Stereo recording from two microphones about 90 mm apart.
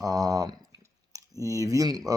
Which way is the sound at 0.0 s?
45° right (ahead or behind).